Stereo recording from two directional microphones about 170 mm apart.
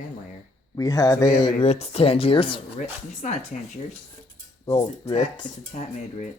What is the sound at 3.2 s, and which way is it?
Speech, 45° left (ahead or behind).